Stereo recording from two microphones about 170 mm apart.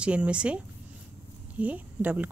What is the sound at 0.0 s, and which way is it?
Speech, 5° right (ahead or behind).